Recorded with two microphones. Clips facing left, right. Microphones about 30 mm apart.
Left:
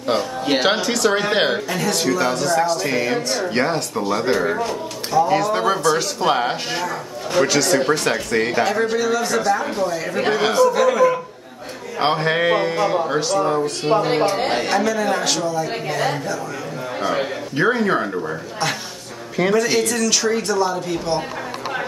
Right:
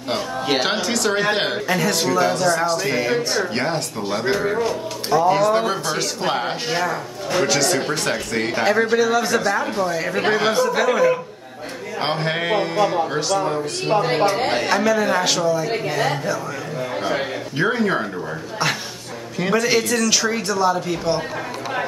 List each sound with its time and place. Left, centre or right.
0.1 s speech: centre
8.6 s speech: centre
10.7 s speech: centre
12.0 s speech: centre
19.5 s speech: centre